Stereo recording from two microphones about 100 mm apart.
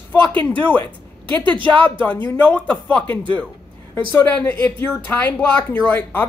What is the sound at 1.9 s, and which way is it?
Speech, 15° left (ahead or behind).